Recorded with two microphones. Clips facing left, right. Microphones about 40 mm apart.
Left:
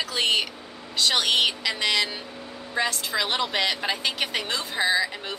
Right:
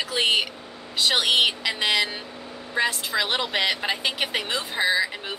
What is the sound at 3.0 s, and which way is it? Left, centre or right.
A woman's voice, centre.